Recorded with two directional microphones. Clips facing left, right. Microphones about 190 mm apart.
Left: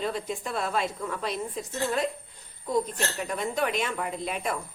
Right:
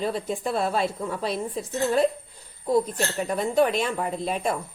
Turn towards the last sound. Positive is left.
turn(degrees=-35)  # may be behind; listen again after turning